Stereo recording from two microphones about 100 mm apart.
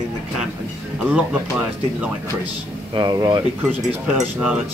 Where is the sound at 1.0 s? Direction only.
10° right (ahead or behind).